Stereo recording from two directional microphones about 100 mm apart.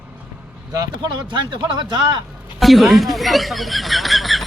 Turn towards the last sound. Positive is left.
turn(degrees=0)  # may be behind; listen again after turning